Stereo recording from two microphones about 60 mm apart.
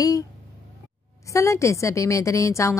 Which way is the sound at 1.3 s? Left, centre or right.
Left.